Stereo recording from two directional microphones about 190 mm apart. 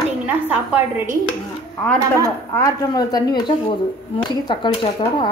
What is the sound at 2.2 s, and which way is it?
Speech, 15° left (ahead or behind).